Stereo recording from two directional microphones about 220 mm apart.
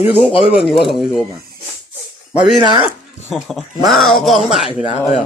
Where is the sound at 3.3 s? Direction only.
Centre (ahead or behind).